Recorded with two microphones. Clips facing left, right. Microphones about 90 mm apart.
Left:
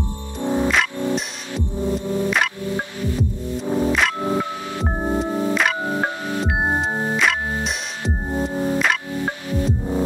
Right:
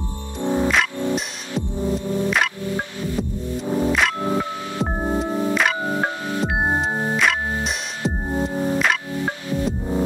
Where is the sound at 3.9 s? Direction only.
Centre (ahead or behind).